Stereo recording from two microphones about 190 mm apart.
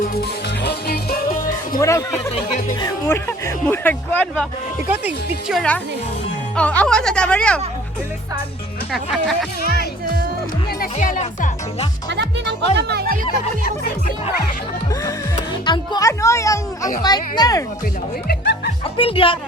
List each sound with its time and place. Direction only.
0.0 s music: 55° left (ahead or behind)
1.8 s speech: 15° left (ahead or behind)
2.3 s speech: 40° left (ahead or behind)
2.7 s speech: 15° left (ahead or behind)
4.9 s speech: 5° right (ahead or behind)
8.9 s speech: centre (ahead or behind)
9.6 s speech: 55° left (ahead or behind)
10.9 s speech: 40° left (ahead or behind)
12.0 s speech: 65° right (ahead or behind)
14.8 s speech: 20° left (ahead or behind)
18.3 s music: 55° left (ahead or behind)
18.9 s speech: 30° left (ahead or behind)